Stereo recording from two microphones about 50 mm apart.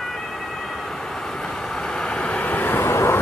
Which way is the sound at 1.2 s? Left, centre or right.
Centre.